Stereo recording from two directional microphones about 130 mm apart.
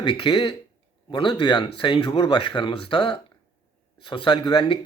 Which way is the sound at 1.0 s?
35° left (ahead or behind).